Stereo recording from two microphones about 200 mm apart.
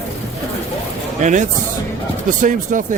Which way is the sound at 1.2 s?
35° right (ahead or behind).